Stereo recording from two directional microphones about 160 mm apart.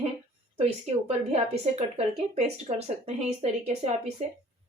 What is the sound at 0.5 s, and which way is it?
A woman's voice, 40° right (ahead or behind).